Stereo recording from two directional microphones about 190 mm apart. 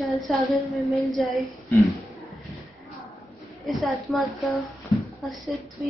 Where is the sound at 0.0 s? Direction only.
Centre (ahead or behind).